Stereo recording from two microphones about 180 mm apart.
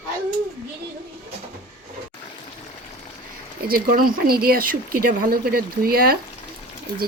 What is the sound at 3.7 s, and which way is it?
Speech, 55° right (ahead or behind).